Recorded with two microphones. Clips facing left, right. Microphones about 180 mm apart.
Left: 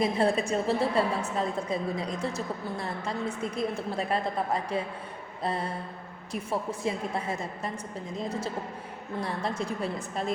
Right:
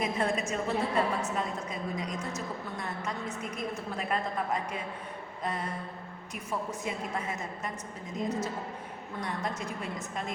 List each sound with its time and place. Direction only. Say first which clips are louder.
0.0 s a woman's voice: left 5 dB; 35° left (ahead or behind)
9.2 s a woman's voice: left 3 dB; 30° left (ahead or behind)